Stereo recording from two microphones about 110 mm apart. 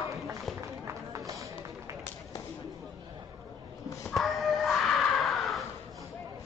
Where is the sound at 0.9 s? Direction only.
30° right (ahead or behind).